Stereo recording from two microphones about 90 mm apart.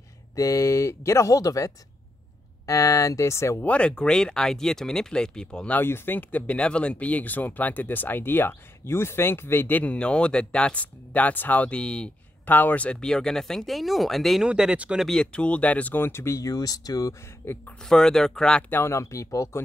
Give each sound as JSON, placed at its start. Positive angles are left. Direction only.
{"t": 0.4, "sound": "speech", "side_deg": 35}
{"t": 3.6, "sound": "speech", "side_deg": 10}
{"t": 5.8, "sound": "speech", "side_deg": 25}
{"t": 14.4, "sound": "speech", "side_deg": -10}
{"t": 15.0, "sound": "speech", "side_deg": 10}
{"t": 17.4, "sound": "speech", "side_deg": 20}
{"t": 17.8, "sound": "speech", "side_deg": 5}
{"t": 18.7, "sound": "speech", "side_deg": 30}